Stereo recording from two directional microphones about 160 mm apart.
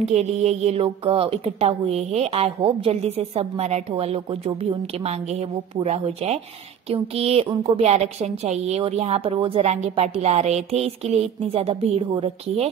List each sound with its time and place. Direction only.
0.0 s a woman's voice: 40° right (ahead or behind)